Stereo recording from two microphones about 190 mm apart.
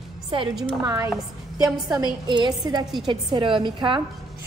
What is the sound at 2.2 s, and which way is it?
A woman's voice, 25° right (ahead or behind).